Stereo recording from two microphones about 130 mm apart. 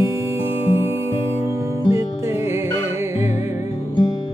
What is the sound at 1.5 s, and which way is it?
Music, 25° right (ahead or behind).